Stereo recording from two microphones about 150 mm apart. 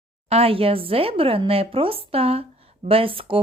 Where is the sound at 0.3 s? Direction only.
40° right (ahead or behind).